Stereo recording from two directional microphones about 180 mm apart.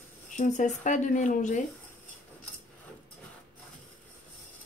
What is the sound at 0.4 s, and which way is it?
Speech, 45° left (ahead or behind).